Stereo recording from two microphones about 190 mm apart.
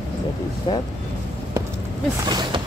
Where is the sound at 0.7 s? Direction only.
25° left (ahead or behind).